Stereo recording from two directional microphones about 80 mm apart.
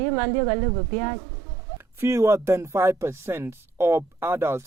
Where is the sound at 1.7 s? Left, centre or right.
Right.